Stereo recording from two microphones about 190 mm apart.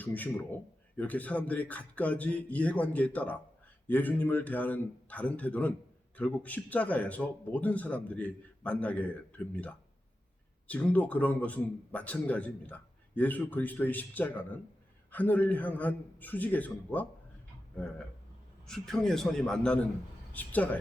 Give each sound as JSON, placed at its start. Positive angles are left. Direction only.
{"t": 0.0, "sound": "a man's voice", "side_deg": 10}
{"t": 10.7, "sound": "a man's voice", "side_deg": 5}